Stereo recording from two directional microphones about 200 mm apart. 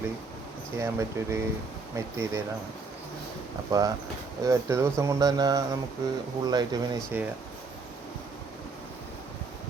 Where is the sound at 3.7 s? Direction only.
20° right (ahead or behind).